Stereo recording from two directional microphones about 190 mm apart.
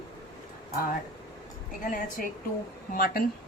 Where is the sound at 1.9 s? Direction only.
45° left (ahead or behind).